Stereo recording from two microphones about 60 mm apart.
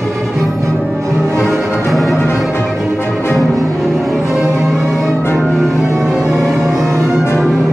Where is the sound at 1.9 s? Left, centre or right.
Centre.